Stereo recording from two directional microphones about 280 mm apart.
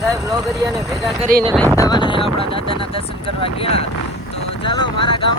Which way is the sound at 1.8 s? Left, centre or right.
Centre.